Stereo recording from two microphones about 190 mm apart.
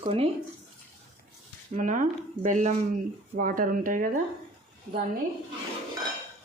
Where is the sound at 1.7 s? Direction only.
40° right (ahead or behind).